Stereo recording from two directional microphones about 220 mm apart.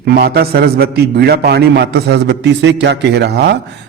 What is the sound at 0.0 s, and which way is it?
A man's voice, 45° right (ahead or behind).